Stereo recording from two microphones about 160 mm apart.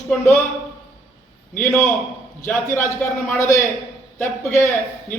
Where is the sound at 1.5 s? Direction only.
10° left (ahead or behind).